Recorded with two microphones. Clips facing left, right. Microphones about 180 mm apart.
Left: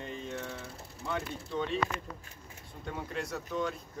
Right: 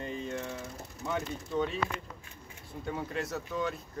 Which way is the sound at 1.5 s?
5° right (ahead or behind).